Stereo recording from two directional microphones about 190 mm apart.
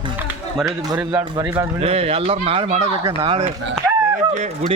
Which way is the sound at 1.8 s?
30° right (ahead or behind).